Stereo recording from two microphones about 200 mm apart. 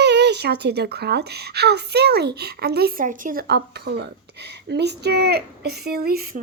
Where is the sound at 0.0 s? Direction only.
60° right (ahead or behind).